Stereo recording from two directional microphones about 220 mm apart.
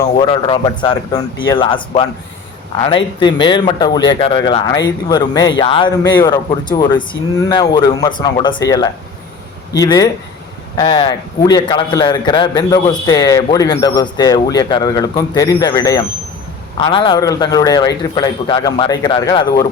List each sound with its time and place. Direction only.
0.0 s a man's voice: 25° left (ahead or behind)